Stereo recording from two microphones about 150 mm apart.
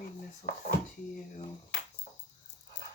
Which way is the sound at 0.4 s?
65° left (ahead or behind).